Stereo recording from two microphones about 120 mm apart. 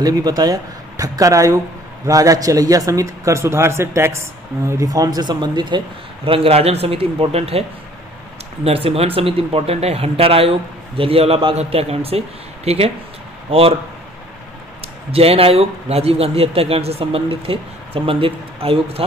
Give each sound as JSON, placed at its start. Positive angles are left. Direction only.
{"t": 0.0, "sound": "speech", "side_deg": -35}
{"t": 6.2, "sound": "speech", "side_deg": -50}
{"t": 8.6, "sound": "speech", "side_deg": -55}
{"t": 15.0, "sound": "speech", "side_deg": -55}